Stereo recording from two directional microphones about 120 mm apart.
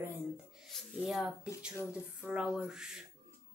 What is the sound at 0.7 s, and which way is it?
Speech, centre (ahead or behind).